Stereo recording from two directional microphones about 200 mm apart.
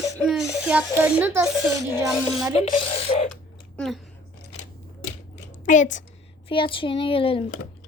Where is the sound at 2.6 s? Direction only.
30° left (ahead or behind).